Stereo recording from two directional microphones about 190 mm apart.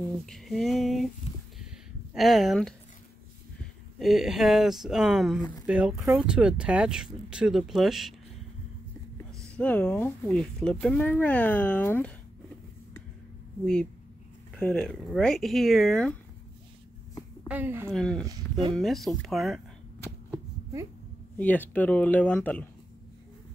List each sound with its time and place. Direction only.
0.3 s speech: centre (ahead or behind)
2.1 s speech: centre (ahead or behind)
4.0 s speech: centre (ahead or behind)
9.6 s speech: 5° left (ahead or behind)
14.5 s speech: 5° left (ahead or behind)
17.5 s a woman's voice: 10° right (ahead or behind)
17.9 s speech: 5° left (ahead or behind)
18.2 s speech: 20° right (ahead or behind)
18.8 s speech: centre (ahead or behind)
21.4 s speech: 10° left (ahead or behind)